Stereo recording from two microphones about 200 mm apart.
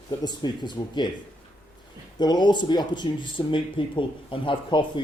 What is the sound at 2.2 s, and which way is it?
Speech, 20° left (ahead or behind).